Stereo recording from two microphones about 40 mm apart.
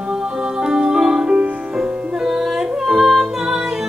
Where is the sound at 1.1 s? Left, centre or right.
Right.